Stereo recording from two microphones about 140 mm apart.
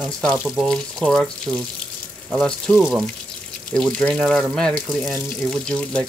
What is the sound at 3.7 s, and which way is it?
Speech, 5° left (ahead or behind).